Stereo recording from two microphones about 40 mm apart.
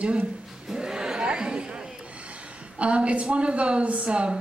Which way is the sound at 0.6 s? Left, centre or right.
Centre.